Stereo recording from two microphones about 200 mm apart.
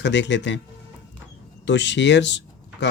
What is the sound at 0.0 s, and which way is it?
Speech, 60° left (ahead or behind).